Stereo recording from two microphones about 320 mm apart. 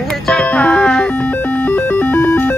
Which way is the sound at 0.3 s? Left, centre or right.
Centre.